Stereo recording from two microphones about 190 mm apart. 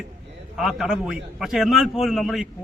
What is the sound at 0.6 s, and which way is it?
Speech, 5° right (ahead or behind).